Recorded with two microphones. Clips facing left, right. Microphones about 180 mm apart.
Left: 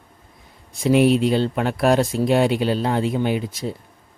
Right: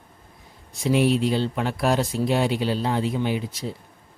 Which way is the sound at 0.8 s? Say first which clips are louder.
Left 4 dB; 60° left (ahead or behind).